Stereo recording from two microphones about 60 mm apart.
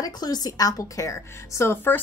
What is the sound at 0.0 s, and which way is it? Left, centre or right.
A woman's voice, left.